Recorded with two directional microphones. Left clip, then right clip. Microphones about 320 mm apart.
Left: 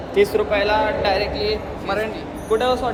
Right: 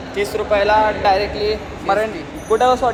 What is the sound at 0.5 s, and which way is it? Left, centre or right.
Speech, centre.